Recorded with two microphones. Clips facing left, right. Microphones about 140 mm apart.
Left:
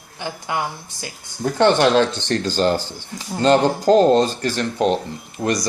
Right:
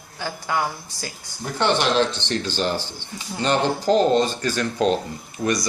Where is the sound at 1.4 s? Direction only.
45° left (ahead or behind).